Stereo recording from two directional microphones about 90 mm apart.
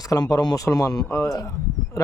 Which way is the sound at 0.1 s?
40° left (ahead or behind).